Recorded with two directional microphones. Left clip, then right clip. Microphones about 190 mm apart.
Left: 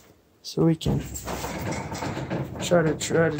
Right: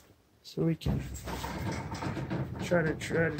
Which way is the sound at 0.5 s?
25° left (ahead or behind).